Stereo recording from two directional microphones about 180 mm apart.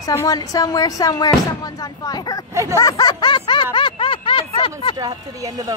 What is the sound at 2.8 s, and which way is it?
Snicker, 20° left (ahead or behind).